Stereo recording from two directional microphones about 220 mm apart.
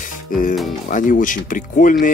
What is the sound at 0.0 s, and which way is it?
Music, 35° left (ahead or behind).